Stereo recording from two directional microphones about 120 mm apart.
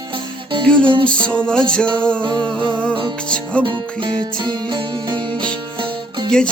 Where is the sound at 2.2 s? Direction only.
40° right (ahead or behind).